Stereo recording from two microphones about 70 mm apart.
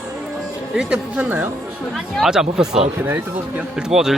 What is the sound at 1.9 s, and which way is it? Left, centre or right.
Speech, centre.